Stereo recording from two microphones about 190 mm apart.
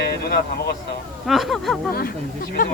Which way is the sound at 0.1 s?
55° left (ahead or behind).